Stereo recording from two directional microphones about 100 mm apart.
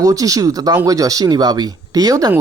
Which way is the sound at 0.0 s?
35° right (ahead or behind).